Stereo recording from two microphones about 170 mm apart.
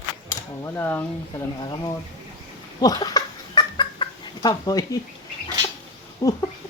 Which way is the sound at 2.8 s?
20° left (ahead or behind).